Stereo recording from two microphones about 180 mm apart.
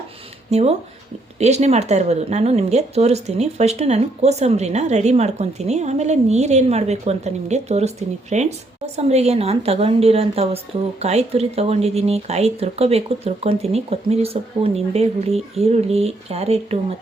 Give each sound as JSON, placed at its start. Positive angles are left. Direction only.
{"t": 0.5, "sound": "speech", "side_deg": -35}